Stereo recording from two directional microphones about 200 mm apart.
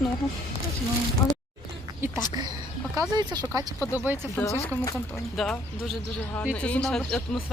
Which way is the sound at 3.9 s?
10° right (ahead or behind).